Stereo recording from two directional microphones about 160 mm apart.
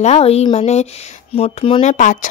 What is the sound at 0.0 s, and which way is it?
Speech, 40° left (ahead or behind).